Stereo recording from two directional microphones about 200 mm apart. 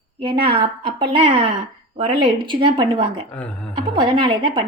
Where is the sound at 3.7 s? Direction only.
25° right (ahead or behind).